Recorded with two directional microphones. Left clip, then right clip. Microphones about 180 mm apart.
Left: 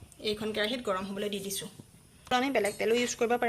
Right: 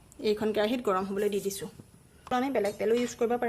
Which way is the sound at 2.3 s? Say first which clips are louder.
Even; 10° right (ahead or behind).